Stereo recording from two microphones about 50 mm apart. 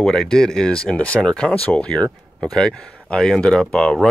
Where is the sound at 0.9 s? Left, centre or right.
Left.